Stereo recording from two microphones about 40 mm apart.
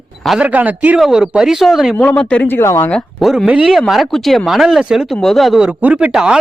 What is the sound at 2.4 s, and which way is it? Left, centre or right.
Speech, left.